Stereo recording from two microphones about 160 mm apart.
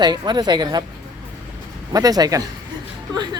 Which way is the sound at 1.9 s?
25° right (ahead or behind).